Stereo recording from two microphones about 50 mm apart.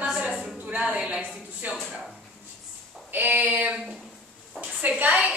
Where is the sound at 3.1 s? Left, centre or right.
Right.